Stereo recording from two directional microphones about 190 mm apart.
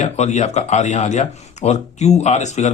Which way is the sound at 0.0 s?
40° left (ahead or behind).